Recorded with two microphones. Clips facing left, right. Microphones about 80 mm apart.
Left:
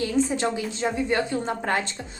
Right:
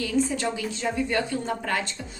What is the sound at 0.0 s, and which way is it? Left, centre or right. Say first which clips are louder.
A woman's voice: left 2 dB; left.